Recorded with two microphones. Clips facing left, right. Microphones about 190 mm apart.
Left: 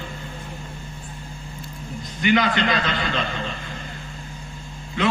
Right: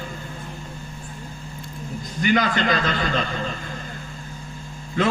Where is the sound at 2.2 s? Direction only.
45° right (ahead or behind).